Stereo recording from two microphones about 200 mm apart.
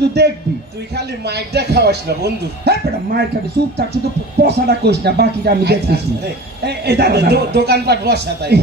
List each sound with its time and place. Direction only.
0.0 s speech: 55° right (ahead or behind)